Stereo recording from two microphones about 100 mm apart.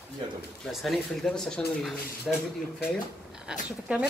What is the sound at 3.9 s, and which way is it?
Speech, 15° right (ahead or behind).